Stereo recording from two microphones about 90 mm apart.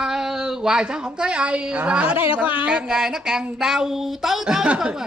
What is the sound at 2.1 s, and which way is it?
Speech, 90° left.